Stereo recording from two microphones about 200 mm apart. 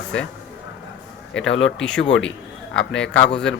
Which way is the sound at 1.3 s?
70° left (ahead or behind).